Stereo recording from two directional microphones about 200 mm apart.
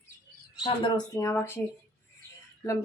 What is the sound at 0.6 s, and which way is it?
Speech, 20° left (ahead or behind).